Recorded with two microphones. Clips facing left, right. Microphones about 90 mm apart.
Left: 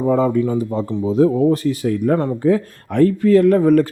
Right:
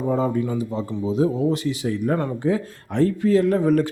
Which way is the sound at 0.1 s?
80° left.